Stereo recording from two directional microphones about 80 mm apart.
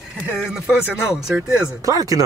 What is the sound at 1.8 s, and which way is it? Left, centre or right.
Speech, right.